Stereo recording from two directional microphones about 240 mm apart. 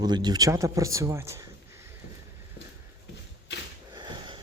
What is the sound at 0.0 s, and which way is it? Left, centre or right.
Speech, centre.